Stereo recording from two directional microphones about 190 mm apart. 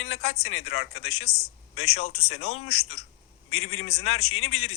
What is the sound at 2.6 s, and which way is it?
A man's voice, 90° left.